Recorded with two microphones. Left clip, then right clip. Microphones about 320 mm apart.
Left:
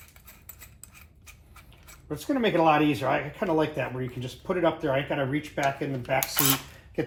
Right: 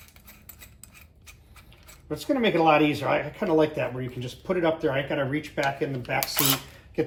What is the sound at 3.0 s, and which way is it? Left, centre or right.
Speech, centre.